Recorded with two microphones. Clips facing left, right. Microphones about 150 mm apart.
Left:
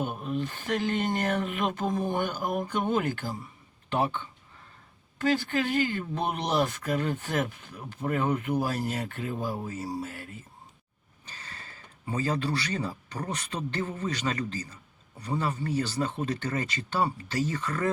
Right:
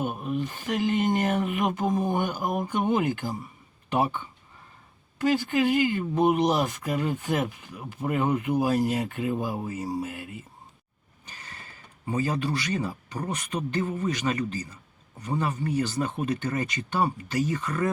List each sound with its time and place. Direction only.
0.0 s speech: 15° right (ahead or behind)
11.3 s a sound: 15° right (ahead or behind)
12.1 s speech: 15° right (ahead or behind)